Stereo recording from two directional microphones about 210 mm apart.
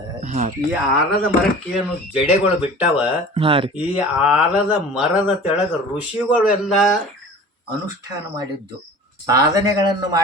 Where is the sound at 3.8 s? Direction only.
5° right (ahead or behind).